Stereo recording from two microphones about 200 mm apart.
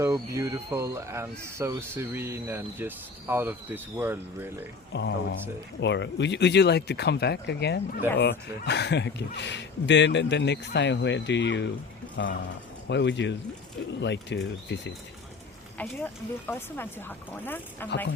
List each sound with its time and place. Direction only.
0.0 s speech: 15° right (ahead or behind)
4.9 s speech: 60° left (ahead or behind)
15.8 s speech: 10° left (ahead or behind)